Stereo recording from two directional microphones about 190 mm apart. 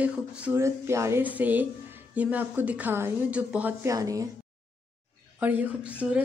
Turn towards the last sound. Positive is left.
turn(degrees=-10)  # may be behind; listen again after turning